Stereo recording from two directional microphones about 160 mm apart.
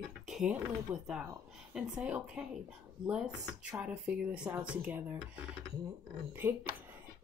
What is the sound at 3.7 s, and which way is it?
Speech, 5° right (ahead or behind).